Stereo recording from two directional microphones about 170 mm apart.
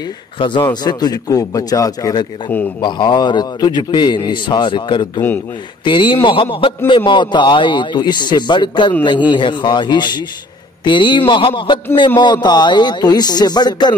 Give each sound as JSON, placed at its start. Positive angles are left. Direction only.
{"t": 0.4, "sound": "a man's voice", "side_deg": 30}